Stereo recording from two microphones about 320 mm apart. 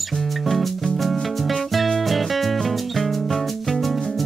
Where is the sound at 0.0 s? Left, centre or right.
Centre.